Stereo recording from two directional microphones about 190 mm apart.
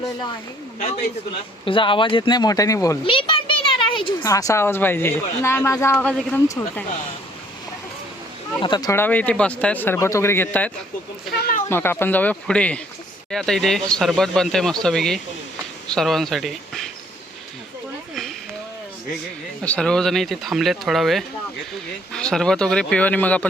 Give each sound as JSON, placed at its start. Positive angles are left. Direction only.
{"t": 1.6, "sound": "speech", "side_deg": 25}
{"t": 3.1, "sound": "a woman's voice", "side_deg": 25}
{"t": 8.6, "sound": "speech", "side_deg": 20}
{"t": 11.3, "sound": "speech", "side_deg": 55}
{"t": 11.7, "sound": "speech", "side_deg": 10}
{"t": 19.6, "sound": "speech", "side_deg": 5}